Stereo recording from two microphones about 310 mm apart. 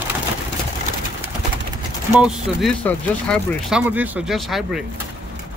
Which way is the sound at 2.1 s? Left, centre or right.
Centre.